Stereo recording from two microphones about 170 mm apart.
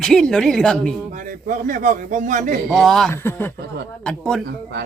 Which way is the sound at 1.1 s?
50° right (ahead or behind).